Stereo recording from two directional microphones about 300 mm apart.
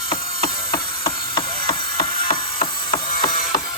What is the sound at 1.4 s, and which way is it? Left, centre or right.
Ratchet, centre.